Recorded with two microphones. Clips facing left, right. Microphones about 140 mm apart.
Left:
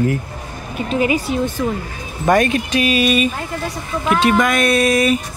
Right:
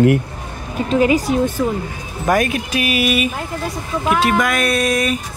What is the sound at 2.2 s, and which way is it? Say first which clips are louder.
Speech: left 2 dB; 5° right (ahead or behind).